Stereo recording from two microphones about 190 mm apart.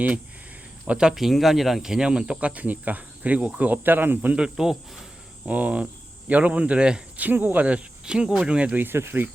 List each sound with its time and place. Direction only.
0.9 s speech: 5° right (ahead or behind)